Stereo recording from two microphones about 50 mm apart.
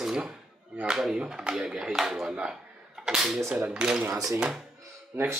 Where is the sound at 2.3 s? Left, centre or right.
Centre.